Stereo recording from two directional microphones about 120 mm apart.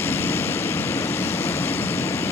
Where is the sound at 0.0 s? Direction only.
20° left (ahead or behind).